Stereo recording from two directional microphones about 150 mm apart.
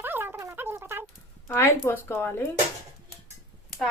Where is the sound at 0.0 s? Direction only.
15° right (ahead or behind).